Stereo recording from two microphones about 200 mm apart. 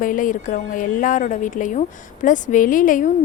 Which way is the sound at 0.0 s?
40° left (ahead or behind).